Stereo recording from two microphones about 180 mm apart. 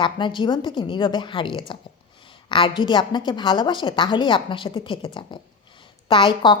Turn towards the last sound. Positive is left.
turn(degrees=25)  # may be behind; listen again after turning